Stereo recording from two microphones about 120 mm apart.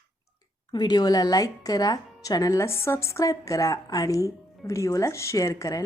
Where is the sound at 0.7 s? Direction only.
35° left (ahead or behind).